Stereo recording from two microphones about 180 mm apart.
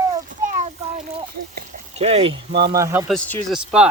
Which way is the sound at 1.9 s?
35° right (ahead or behind).